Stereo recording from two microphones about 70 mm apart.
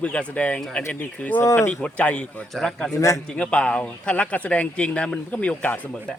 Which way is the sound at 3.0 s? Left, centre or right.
Left.